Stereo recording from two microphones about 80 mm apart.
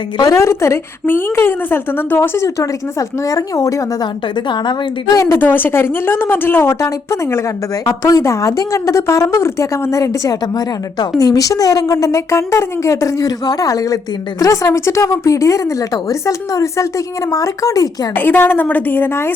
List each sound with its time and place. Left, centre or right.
0.3 s a woman's voice: left
3.2 s a woman's voice: left
5.1 s a woman's voice: left
5.4 s a woman's voice: left
18.2 s speech: left